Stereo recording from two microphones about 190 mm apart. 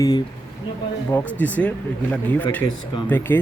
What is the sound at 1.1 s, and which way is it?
A man's voice, 10° left (ahead or behind).